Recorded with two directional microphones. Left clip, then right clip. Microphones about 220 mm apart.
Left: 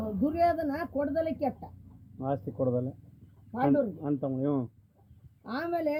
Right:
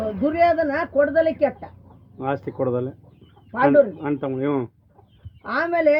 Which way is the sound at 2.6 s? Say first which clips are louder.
Right 6 dB; 40° right (ahead or behind).